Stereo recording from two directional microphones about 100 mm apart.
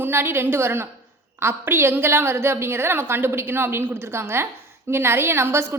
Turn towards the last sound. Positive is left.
turn(degrees=-25)  # may be behind; listen again after turning